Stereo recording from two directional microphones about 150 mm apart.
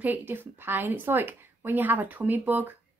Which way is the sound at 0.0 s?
15° right (ahead or behind).